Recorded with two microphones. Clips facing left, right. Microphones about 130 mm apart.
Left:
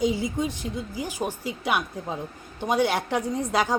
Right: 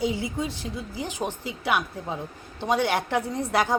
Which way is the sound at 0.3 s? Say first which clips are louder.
Left 2 dB; 20° left (ahead or behind).